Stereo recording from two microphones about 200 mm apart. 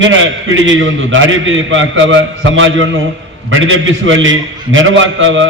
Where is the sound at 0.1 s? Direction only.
75° right (ahead or behind).